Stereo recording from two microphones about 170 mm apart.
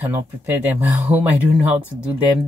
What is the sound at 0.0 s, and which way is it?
Speech, 10° right (ahead or behind).